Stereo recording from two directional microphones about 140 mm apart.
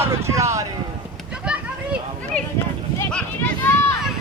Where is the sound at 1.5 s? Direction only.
5° right (ahead or behind).